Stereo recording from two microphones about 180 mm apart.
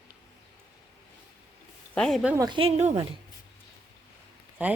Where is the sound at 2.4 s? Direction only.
25° right (ahead or behind).